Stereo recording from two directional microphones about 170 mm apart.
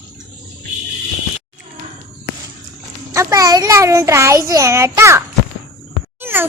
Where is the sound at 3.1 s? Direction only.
20° right (ahead or behind).